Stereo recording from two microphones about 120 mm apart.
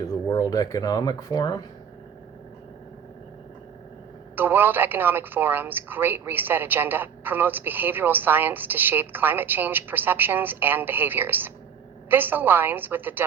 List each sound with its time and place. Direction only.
0.0 s speech: 30° left (ahead or behind)
4.4 s a woman's voice: 15° right (ahead or behind)